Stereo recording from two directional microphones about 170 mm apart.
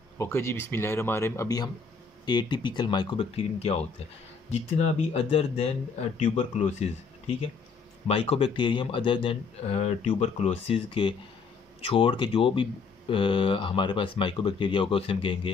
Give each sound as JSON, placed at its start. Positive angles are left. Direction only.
{"t": 0.2, "sound": "speech", "side_deg": 15}